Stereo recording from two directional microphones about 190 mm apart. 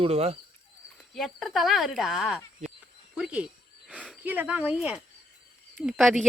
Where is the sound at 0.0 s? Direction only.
30° right (ahead or behind).